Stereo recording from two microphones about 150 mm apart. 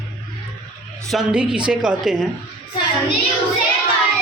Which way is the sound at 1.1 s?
5° right (ahead or behind).